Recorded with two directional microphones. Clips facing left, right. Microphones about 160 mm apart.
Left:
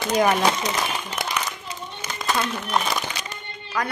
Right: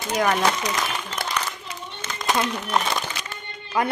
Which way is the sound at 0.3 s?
15° left (ahead or behind).